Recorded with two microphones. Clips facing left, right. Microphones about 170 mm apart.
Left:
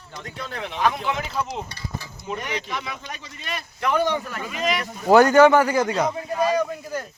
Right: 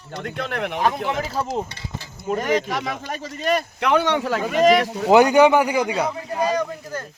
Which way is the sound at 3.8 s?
70° right (ahead or behind).